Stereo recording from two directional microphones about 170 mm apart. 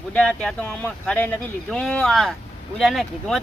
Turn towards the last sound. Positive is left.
turn(degrees=0)  # may be behind; listen again after turning